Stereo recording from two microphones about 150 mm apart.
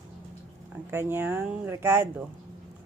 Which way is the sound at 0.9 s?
15° right (ahead or behind).